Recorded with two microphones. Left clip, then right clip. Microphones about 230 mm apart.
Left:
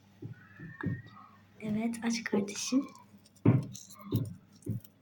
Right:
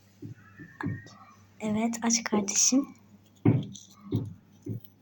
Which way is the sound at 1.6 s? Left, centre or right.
Centre.